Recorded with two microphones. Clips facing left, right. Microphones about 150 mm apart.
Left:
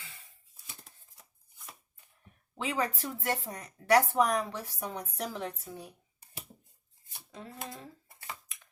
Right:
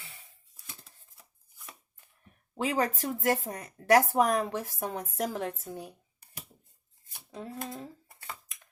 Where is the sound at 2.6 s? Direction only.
40° right (ahead or behind).